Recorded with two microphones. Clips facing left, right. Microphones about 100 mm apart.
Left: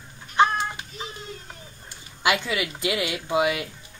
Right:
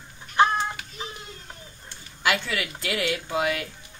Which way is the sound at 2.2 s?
15° left (ahead or behind).